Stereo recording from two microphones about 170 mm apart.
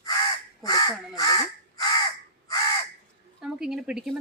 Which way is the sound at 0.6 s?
20° left (ahead or behind).